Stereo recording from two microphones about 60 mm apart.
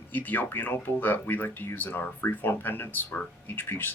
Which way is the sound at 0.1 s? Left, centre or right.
Left.